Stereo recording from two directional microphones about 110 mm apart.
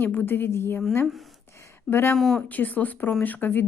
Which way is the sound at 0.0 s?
20° left (ahead or behind).